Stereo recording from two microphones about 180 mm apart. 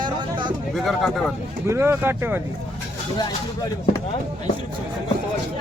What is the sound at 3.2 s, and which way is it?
Speech, 20° left (ahead or behind).